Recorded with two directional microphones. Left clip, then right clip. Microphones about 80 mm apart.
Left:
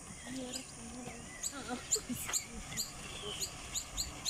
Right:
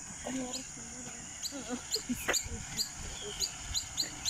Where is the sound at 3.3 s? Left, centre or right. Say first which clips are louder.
Right 5 dB; left.